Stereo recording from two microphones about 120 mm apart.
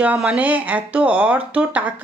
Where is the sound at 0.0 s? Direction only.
10° right (ahead or behind).